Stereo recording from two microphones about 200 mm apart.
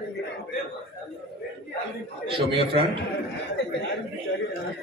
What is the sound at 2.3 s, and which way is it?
Speech, 25° right (ahead or behind).